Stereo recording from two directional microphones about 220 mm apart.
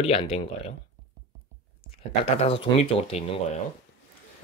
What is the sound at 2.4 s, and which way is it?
Speech, 25° left (ahead or behind).